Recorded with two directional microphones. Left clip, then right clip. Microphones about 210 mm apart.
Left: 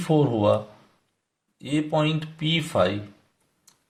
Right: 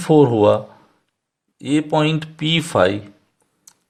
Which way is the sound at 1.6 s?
45° right (ahead or behind).